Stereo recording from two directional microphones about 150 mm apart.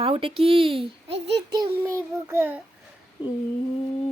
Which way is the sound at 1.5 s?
15° right (ahead or behind).